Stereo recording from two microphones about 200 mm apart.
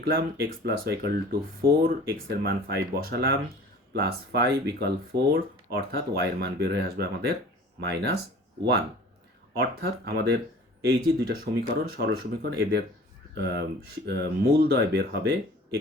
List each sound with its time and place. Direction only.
0.0 s speech: 50° right (ahead or behind)
9.6 s speech: 55° right (ahead or behind)
14.1 s speech: 55° right (ahead or behind)